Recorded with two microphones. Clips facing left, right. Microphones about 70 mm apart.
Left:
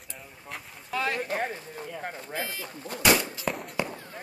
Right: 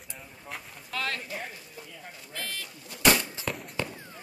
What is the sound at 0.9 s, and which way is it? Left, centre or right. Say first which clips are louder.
Speech: left 4 dB; centre.